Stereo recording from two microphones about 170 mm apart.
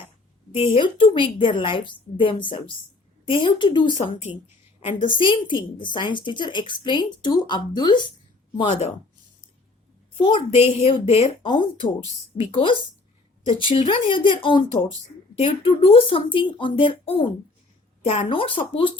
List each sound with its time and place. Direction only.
0.7 s a woman's voice: 30° left (ahead or behind)
10.2 s speech: 30° left (ahead or behind)